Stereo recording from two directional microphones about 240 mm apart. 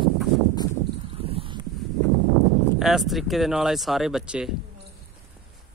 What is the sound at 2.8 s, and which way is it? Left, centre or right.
Speech, centre.